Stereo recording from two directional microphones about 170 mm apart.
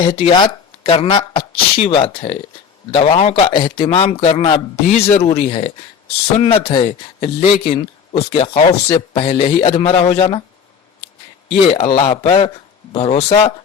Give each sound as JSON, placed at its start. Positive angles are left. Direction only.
{"t": 0.0, "sound": "speech", "side_deg": 30}
{"t": 11.4, "sound": "speech", "side_deg": 35}